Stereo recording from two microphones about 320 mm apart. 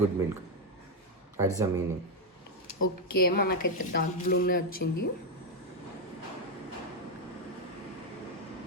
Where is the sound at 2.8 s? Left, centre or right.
Left.